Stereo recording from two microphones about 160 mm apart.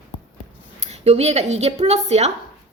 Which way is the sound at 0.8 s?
40° right (ahead or behind).